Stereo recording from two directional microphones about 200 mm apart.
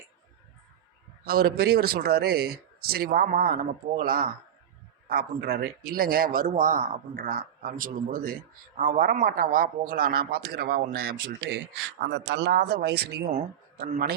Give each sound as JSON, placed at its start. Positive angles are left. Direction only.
{"t": 1.2, "sound": "speech", "side_deg": -50}